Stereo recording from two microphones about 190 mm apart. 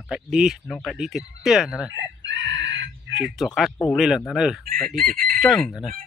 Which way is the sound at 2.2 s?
70° right (ahead or behind).